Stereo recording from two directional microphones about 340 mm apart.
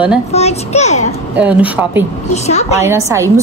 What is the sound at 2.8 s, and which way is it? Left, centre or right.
Speech, centre.